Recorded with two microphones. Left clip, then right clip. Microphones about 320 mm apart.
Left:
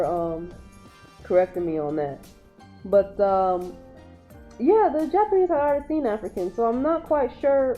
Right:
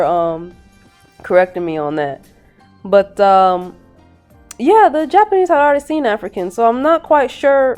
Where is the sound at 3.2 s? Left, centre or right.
Right.